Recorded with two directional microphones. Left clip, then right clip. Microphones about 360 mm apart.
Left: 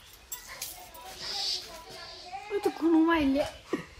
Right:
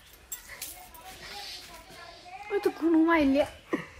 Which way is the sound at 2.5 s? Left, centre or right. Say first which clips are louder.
Right 1 dB; centre.